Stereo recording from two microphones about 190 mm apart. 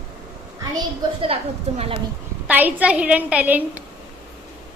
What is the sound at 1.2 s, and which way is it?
Speech, 30° right (ahead or behind).